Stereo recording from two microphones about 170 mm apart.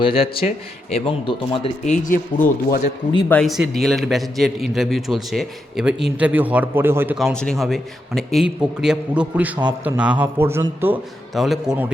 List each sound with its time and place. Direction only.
0.0 s speech: 35° left (ahead or behind); by 2.5 s 50° left (ahead or behind)
3.2 s a man's voice: 5° left (ahead or behind); by 7.2 s 15° right (ahead or behind)
7.2 s a man's voice: 5° left (ahead or behind); by 11.0 s 10° right (ahead or behind)
11.3 s a man's voice: centre (ahead or behind)